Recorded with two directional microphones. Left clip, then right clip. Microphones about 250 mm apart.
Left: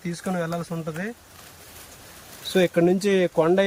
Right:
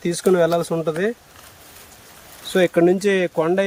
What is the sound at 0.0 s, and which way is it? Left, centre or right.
Speech, right.